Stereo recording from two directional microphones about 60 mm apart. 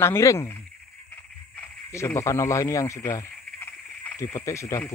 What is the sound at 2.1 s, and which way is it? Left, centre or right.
Speech, left.